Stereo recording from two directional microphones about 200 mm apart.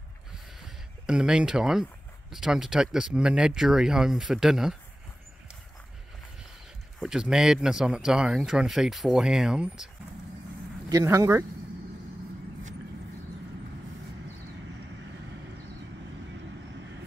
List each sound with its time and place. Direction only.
0.3 s a sound: 5° right (ahead or behind)
2.3 s speech: centre (ahead or behind)
7.0 s speech: 5° right (ahead or behind)
10.9 s speech: 15° right (ahead or behind)